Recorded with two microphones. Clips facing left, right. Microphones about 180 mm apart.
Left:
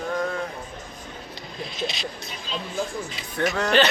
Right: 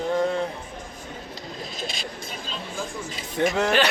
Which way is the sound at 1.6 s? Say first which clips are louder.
Left 5 dB; 45° right (ahead or behind).